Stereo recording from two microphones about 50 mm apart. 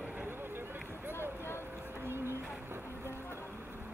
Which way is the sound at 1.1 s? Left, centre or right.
Left.